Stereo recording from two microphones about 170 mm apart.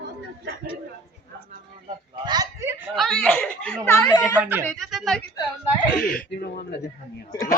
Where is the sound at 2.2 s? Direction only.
25° right (ahead or behind).